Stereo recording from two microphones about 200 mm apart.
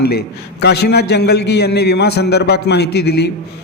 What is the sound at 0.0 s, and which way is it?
A man's voice, 55° left (ahead or behind).